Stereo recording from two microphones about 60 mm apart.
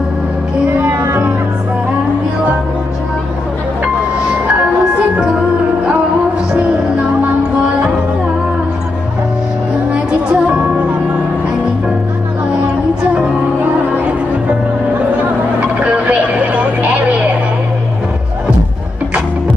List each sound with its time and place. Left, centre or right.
0.7 s music: right
10.3 s music: right
15.8 s vehicle: right